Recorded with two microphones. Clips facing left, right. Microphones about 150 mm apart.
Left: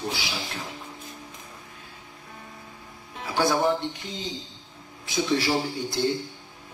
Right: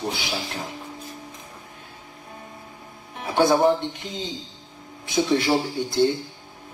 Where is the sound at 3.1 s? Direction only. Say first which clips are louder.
Right 5 dB; 20° right (ahead or behind).